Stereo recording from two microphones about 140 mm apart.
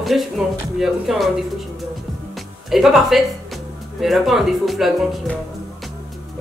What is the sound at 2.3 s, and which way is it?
Music, centre (ahead or behind).